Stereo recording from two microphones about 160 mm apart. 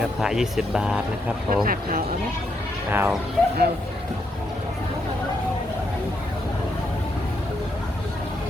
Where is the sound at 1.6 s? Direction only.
65° right (ahead or behind).